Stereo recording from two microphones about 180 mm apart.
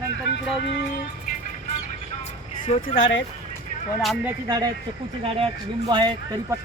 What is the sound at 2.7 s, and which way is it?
Speech, 35° left (ahead or behind).